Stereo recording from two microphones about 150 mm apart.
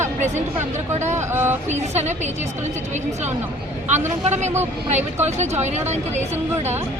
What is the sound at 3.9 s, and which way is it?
Speech, 50° right (ahead or behind).